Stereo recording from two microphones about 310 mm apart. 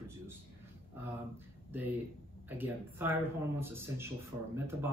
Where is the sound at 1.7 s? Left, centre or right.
Centre.